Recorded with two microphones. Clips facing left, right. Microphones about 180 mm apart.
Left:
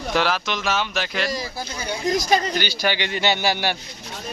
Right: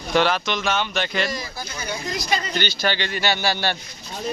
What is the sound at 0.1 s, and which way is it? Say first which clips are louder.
Speech: right 3 dB; 5° left (ahead or behind).